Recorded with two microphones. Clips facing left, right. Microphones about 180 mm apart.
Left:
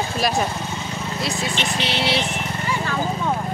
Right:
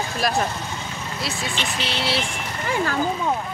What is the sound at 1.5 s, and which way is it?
Speech, 30° left (ahead or behind).